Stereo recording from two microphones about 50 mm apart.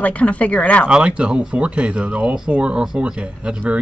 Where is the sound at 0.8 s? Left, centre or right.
Right.